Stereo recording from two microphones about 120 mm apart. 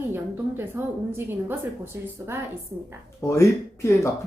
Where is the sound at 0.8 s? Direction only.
15° right (ahead or behind).